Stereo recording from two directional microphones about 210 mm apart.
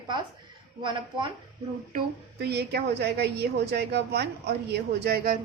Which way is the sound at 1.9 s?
50° right (ahead or behind).